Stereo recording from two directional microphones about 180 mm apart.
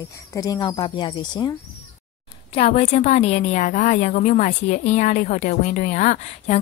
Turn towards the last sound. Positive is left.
turn(degrees=40)  # may be behind; listen again after turning